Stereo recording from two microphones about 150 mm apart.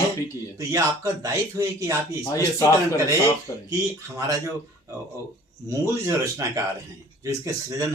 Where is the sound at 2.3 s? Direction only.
20° left (ahead or behind).